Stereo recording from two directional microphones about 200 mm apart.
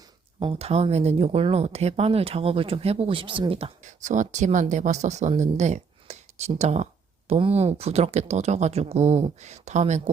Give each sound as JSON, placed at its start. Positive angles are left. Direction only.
{"t": 0.3, "sound": "speech", "side_deg": -30}